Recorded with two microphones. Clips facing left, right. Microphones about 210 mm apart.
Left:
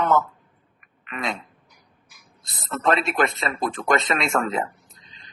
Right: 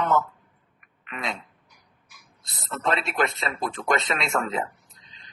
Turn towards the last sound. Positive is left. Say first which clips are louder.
# left 3 dB
turn(degrees=50)  # may be behind; listen again after turning